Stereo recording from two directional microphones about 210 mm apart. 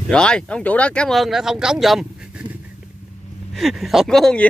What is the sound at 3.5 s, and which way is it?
Speech, centre (ahead or behind).